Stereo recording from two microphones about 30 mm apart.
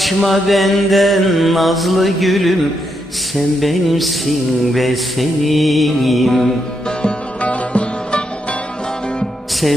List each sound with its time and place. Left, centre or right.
0.0 s music: centre
7.4 s music: left
9.6 s music: centre